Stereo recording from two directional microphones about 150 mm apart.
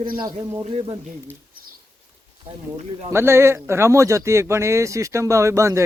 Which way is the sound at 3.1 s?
15° right (ahead or behind).